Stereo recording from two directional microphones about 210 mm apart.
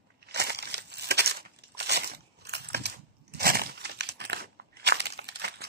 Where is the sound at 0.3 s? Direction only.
50° right (ahead or behind).